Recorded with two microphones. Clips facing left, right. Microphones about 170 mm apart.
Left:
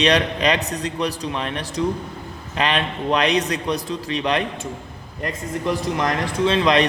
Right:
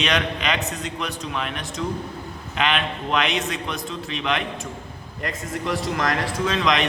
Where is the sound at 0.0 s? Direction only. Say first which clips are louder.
Left 5 dB; 35° left (ahead or behind).